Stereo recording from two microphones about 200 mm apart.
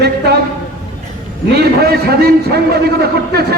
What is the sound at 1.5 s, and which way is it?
A man's voice, 55° right (ahead or behind).